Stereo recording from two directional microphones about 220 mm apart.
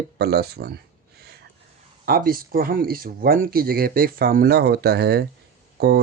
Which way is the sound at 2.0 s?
40° right (ahead or behind).